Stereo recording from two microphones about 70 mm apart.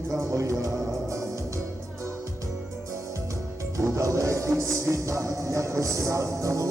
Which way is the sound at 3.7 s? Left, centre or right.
Right.